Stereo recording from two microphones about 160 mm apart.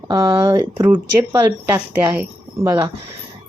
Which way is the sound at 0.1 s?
20° right (ahead or behind).